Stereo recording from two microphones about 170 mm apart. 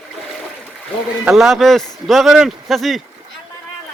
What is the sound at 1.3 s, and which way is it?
Speech, centre (ahead or behind).